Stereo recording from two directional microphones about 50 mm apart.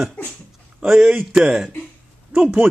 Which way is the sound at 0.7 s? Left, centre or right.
Centre.